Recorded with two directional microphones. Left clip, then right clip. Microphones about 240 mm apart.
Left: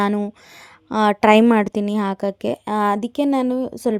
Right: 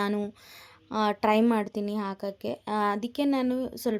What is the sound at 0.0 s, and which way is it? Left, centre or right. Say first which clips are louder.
A woman's voice: left 9 dB; left.